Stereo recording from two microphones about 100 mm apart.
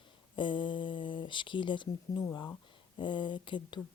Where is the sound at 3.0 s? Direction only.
50° left (ahead or behind).